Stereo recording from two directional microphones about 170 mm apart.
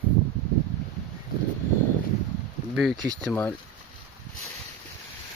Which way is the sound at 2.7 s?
Centre (ahead or behind).